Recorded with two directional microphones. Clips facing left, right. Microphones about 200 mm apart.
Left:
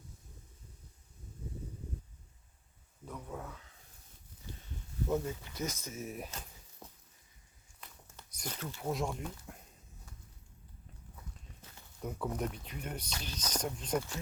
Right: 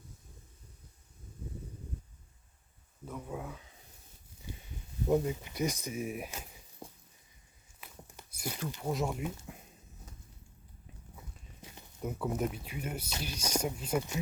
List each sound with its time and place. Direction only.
3.1 s speech: 10° right (ahead or behind)
6.8 s a sound: 10° right (ahead or behind)
7.8 s walk: 10° right (ahead or behind)
8.8 s speech: centre (ahead or behind)
11.6 s a sound: 15° right (ahead or behind)
12.0 s speech: 5° right (ahead or behind)